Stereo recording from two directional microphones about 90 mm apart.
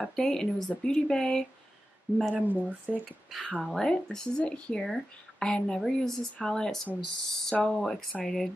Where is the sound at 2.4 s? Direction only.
20° right (ahead or behind).